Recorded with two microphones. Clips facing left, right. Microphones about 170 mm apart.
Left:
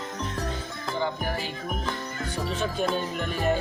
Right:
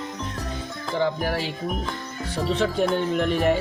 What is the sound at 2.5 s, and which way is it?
Music, 75° right (ahead or behind).